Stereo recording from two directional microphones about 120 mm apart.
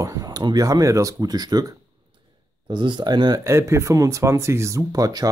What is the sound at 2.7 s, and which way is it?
Speech, 40° right (ahead or behind).